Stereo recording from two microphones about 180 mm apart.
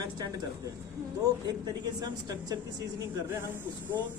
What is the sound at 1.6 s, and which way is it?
Speech, 20° right (ahead or behind).